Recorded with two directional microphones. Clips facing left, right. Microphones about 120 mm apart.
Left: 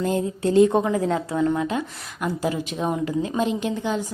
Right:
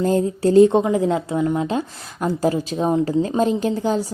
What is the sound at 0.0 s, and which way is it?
Speech, 35° right (ahead or behind).